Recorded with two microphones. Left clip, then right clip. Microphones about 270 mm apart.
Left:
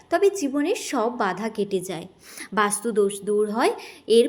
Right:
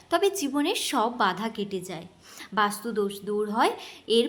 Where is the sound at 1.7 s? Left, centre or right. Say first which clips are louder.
Left 7 dB; centre.